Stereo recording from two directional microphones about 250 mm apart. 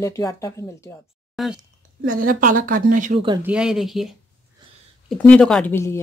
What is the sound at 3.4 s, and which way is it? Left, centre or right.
Speech, centre.